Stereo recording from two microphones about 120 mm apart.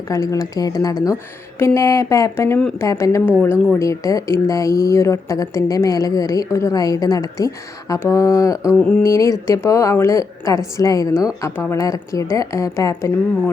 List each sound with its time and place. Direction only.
0.1 s a woman's voice: 30° left (ahead or behind)
8.8 s a sound: 10° left (ahead or behind)
9.0 s a woman's voice: 25° left (ahead or behind)